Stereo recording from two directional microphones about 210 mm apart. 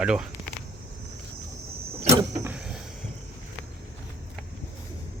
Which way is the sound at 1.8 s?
30° right (ahead or behind).